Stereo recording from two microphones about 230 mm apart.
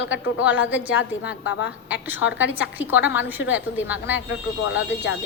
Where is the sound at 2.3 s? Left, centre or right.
Centre.